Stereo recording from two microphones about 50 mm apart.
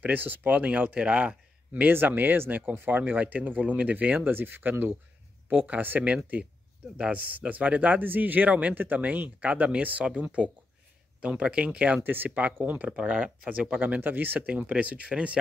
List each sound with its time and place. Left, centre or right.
0.0 s speech: right
1.9 s speech: right
4.2 s speech: right
12.0 s speech: right